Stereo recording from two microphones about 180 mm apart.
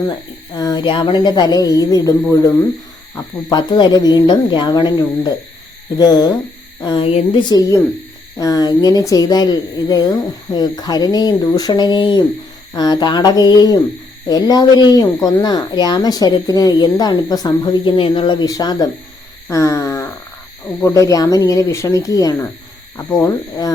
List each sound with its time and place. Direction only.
0.1 s speech: 20° left (ahead or behind)
19.5 s a sound: 15° left (ahead or behind)
20.8 s speech: 20° left (ahead or behind)